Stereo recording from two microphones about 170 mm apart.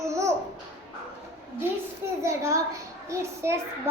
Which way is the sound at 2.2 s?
15° right (ahead or behind).